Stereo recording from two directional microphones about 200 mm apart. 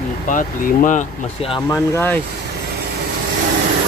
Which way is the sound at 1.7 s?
10° left (ahead or behind).